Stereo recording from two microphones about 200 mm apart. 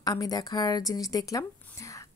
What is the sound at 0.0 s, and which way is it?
A woman's voice, 20° left (ahead or behind).